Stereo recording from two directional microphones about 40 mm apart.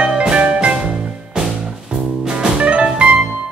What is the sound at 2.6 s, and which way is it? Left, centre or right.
Music, right.